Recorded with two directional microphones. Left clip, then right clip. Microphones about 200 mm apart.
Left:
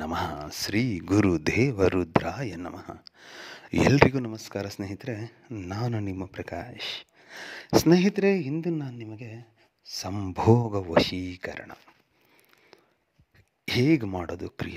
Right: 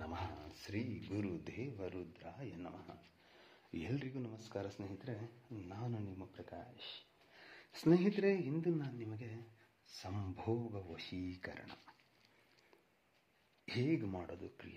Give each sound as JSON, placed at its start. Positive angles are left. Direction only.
{"t": 0.0, "sound": "speech", "side_deg": 55}
{"t": 13.7, "sound": "speech", "side_deg": 45}